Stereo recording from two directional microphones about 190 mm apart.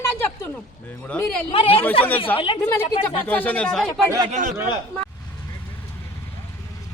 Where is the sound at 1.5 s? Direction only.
30° left (ahead or behind).